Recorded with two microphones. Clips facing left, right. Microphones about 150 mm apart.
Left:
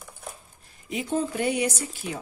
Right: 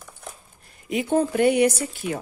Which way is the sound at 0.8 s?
60° right (ahead or behind).